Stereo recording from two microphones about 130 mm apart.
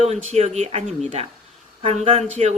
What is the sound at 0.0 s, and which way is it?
Speech, 55° right (ahead or behind).